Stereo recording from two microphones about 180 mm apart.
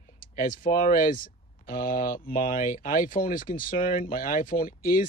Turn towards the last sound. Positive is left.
turn(degrees=50)  # may be behind; listen again after turning